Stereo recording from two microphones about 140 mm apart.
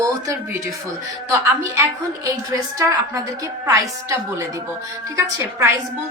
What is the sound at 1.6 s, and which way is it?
Speech, 20° right (ahead or behind).